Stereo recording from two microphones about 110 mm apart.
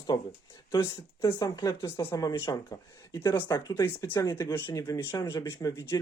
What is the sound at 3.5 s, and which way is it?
Speech, 40° left (ahead or behind).